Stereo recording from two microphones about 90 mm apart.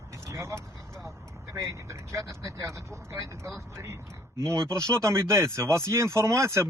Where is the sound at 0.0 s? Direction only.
35° right (ahead or behind).